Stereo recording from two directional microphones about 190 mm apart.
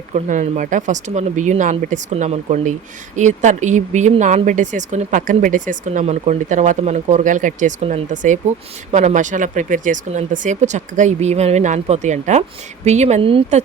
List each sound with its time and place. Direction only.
0.1 s speech: 40° right (ahead or behind)